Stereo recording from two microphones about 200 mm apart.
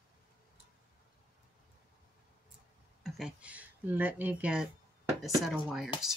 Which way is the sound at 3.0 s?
Centre (ahead or behind).